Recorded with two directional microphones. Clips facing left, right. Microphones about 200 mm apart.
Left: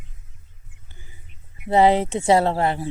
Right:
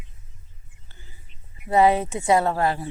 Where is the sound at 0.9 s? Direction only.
15° left (ahead or behind).